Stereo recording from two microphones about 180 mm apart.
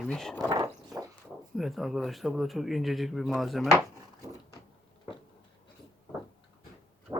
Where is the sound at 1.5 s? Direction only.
Centre (ahead or behind).